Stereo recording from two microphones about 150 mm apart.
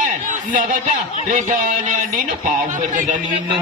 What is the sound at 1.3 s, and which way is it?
A man's voice, 60° right (ahead or behind).